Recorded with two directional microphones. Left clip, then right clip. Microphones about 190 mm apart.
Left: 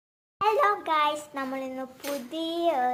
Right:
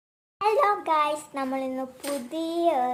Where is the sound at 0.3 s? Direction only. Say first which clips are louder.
Right 1 dB; 10° right (ahead or behind).